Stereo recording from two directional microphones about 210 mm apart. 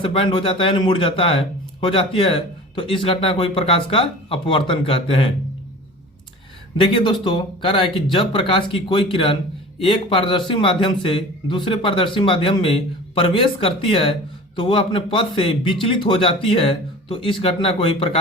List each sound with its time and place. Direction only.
0.0 s a man's voice: 25° left (ahead or behind)
6.9 s a man's voice: 25° left (ahead or behind)